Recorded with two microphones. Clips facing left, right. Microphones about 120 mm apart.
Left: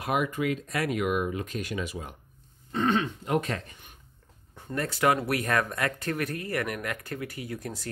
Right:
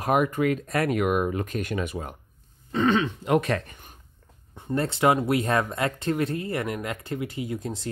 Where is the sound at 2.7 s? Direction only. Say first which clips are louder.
Right 4 dB; 90° right; by 3.7 s 70° right (ahead or behind).